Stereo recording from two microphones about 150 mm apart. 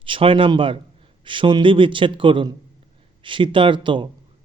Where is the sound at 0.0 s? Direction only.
35° right (ahead or behind).